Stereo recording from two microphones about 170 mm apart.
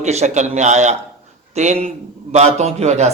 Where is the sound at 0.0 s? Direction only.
40° right (ahead or behind).